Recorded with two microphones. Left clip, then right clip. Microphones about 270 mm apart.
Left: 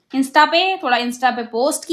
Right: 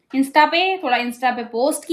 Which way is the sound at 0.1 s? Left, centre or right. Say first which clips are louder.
Left 1 dB; centre.